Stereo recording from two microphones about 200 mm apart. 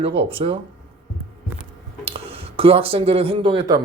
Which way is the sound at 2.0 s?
30° right (ahead or behind).